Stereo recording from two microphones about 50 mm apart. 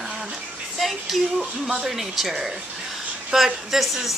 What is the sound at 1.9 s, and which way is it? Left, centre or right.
Speech, centre.